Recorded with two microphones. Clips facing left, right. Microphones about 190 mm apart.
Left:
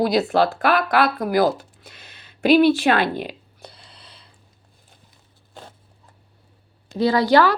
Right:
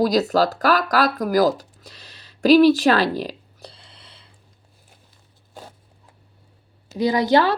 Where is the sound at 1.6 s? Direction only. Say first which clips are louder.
Right 1 dB; 35° right (ahead or behind).